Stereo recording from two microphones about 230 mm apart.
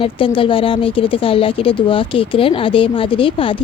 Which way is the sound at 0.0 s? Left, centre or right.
Left.